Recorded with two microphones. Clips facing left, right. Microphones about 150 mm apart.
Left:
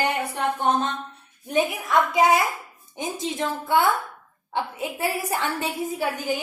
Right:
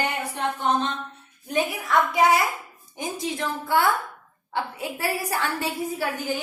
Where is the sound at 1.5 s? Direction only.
20° left (ahead or behind).